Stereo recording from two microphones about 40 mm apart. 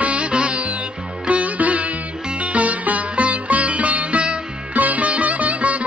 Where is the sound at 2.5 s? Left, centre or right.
Right.